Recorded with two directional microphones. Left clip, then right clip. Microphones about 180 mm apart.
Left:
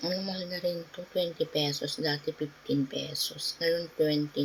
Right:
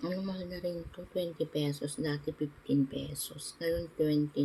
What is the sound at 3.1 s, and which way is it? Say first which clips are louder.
Speech: left 11 dB; 40° right (ahead or behind).